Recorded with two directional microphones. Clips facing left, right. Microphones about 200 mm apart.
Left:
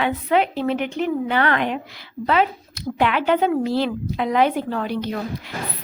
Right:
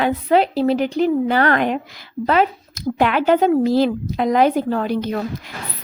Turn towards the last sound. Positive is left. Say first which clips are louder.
# right 3 dB
turn(degrees=-45)  # may be behind; listen again after turning